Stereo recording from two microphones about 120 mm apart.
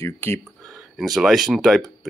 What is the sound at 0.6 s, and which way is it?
Speech, centre (ahead or behind).